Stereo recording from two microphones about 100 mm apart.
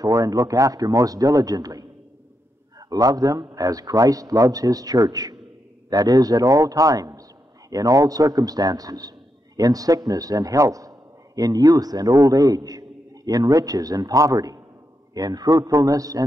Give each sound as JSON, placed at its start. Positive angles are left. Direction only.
{"t": 0.0, "sound": "a man's voice", "side_deg": -35}
{"t": 2.9, "sound": "a man's voice", "side_deg": -35}